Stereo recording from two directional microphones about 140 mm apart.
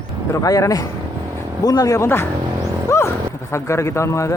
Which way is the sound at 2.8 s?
20° left (ahead or behind).